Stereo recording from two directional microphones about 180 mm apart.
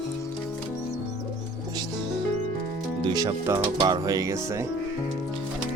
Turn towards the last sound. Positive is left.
turn(degrees=-20)  # may be behind; listen again after turning